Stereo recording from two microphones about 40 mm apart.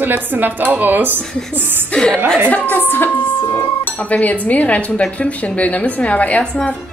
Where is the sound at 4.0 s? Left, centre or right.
Left.